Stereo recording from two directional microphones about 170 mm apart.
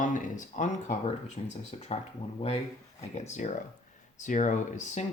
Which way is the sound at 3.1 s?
40° left (ahead or behind).